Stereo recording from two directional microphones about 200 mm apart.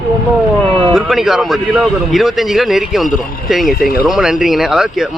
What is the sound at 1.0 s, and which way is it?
Speech, centre (ahead or behind).